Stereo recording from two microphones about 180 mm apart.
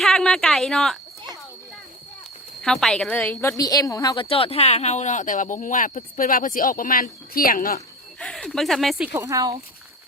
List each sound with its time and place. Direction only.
0.0 s a woman's voice: centre (ahead or behind)
2.6 s a woman's voice: 5° left (ahead or behind)
3.6 s a woman's voice: 20° left (ahead or behind)
4.3 s speech: 30° left (ahead or behind); by 7.8 s 50° left (ahead or behind)
8.2 s speech: 5° left (ahead or behind)
9.1 s speech: 15° right (ahead or behind)